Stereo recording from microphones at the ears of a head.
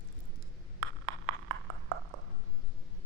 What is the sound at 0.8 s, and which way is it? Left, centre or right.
Ping, right.